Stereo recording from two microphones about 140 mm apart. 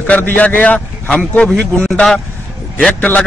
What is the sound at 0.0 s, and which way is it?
A man's voice, 10° left (ahead or behind).